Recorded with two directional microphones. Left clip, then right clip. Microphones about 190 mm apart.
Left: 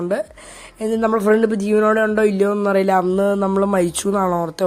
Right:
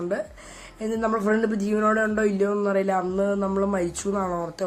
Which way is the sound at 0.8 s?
45° left (ahead or behind).